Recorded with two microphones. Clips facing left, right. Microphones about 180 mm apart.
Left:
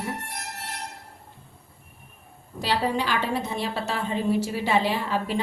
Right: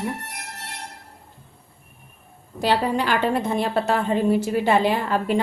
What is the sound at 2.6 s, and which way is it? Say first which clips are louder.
A woman's voice: right 4 dB; 55° right (ahead or behind).